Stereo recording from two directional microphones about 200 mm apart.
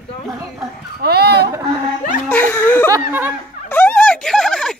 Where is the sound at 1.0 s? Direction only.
50° right (ahead or behind).